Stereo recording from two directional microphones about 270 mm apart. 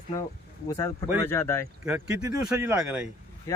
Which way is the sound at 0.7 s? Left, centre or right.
Centre.